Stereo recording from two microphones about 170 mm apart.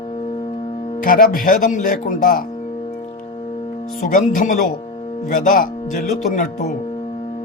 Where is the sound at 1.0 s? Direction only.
55° left (ahead or behind).